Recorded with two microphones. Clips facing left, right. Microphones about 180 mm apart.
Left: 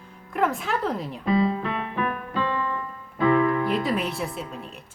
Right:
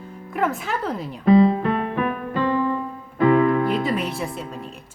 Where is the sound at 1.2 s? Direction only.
45° right (ahead or behind).